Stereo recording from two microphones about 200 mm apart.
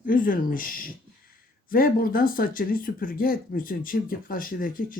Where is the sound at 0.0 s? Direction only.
40° left (ahead or behind).